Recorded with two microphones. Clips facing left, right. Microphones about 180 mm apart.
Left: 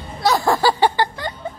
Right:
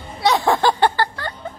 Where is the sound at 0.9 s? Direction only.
20° left (ahead or behind).